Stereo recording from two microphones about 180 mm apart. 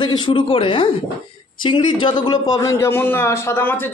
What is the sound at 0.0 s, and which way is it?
A man's voice, 25° left (ahead or behind).